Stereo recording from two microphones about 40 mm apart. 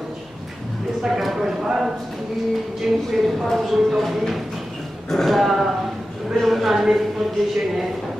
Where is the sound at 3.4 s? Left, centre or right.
Centre.